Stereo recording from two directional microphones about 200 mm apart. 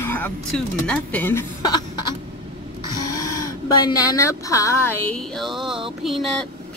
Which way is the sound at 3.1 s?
15° left (ahead or behind).